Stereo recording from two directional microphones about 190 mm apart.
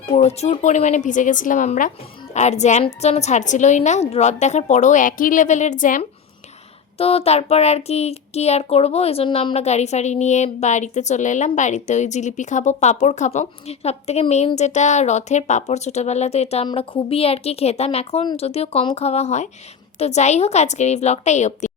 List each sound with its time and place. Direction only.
0.2 s speech: 35° left (ahead or behind)
7.0 s speech: 30° left (ahead or behind)